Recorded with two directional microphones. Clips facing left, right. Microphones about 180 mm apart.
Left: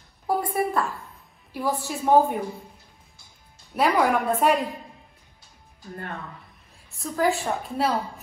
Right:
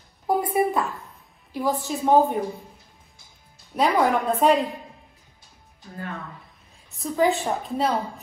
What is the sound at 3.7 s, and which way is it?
Speech, 5° left (ahead or behind).